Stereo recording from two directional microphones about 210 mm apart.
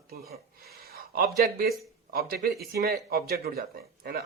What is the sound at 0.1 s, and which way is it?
A man's voice, 45° right (ahead or behind).